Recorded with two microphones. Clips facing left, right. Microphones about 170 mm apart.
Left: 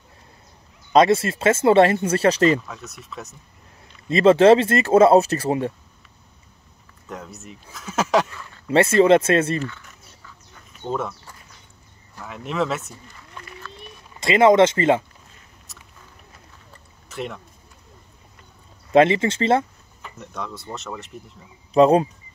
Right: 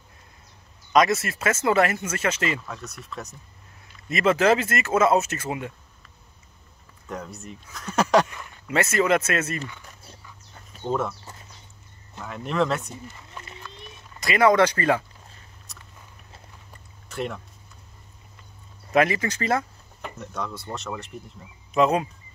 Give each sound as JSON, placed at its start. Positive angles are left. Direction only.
{"t": 0.9, "sound": "speech", "side_deg": 30}
{"t": 2.6, "sound": "speech", "side_deg": 0}
{"t": 4.1, "sound": "speech", "side_deg": 30}
{"t": 7.1, "sound": "speech", "side_deg": 0}
{"t": 8.6, "sound": "speech", "side_deg": 30}
{"t": 10.8, "sound": "speech", "side_deg": 0}
{"t": 12.3, "sound": "speech", "side_deg": 0}
{"t": 14.2, "sound": "speech", "side_deg": 25}
{"t": 15.7, "sound": "a sound", "side_deg": 0}
{"t": 17.1, "sound": "speech", "side_deg": 0}
{"t": 18.9, "sound": "speech", "side_deg": 25}
{"t": 20.2, "sound": "speech", "side_deg": 0}
{"t": 21.7, "sound": "speech", "side_deg": 35}